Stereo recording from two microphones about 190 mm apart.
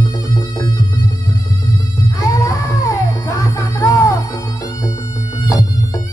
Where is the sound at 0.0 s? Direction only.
20° left (ahead or behind).